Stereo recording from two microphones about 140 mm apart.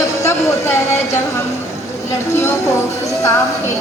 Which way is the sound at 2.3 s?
20° left (ahead or behind).